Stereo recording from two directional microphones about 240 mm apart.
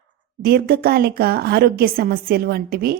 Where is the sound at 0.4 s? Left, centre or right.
Right.